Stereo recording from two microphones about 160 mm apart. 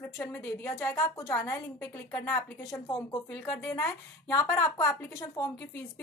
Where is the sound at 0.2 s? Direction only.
15° left (ahead or behind).